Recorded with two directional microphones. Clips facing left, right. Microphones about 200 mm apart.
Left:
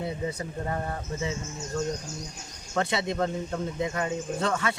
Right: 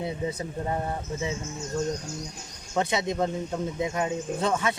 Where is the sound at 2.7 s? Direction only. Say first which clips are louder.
Right 1 dB; 15° right (ahead or behind).